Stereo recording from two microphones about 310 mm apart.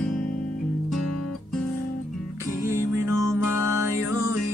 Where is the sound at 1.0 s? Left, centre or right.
Left.